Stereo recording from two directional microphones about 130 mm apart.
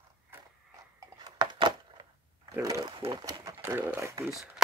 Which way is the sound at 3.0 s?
35° right (ahead or behind).